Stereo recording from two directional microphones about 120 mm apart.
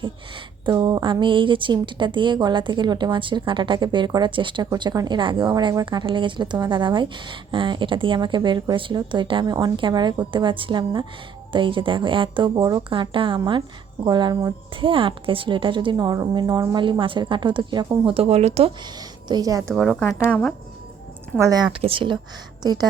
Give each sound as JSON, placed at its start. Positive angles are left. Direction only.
{"t": 0.6, "sound": "a woman's voice", "side_deg": -40}
{"t": 4.7, "sound": "a woman's voice", "side_deg": -30}
{"t": 18.9, "sound": "speech", "side_deg": -30}
{"t": 19.7, "sound": "speech", "side_deg": -5}
{"t": 21.3, "sound": "a woman's voice", "side_deg": -30}
{"t": 21.7, "sound": "a woman's voice", "side_deg": -50}
{"t": 22.6, "sound": "a woman's voice", "side_deg": -35}